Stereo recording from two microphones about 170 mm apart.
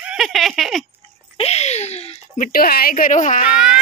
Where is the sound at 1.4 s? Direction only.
40° left (ahead or behind).